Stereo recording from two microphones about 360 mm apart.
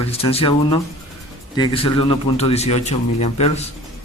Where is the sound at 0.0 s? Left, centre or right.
Centre.